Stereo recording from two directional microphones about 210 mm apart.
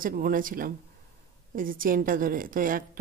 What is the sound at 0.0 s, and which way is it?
A woman's voice, 40° right (ahead or behind).